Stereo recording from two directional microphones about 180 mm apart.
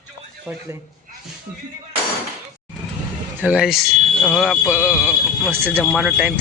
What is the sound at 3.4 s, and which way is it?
Speech, 5° right (ahead or behind).